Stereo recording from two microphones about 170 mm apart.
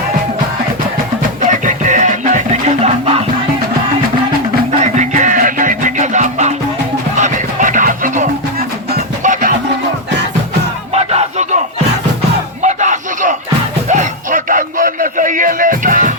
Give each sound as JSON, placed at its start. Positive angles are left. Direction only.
{"t": 1.5, "sound": "music", "side_deg": -45}
{"t": 4.8, "sound": "music", "side_deg": -45}
{"t": 10.9, "sound": "music", "side_deg": -40}
{"t": 12.6, "sound": "a sound", "side_deg": -45}